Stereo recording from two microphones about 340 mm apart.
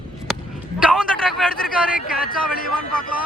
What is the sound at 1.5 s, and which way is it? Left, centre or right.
Speech, left.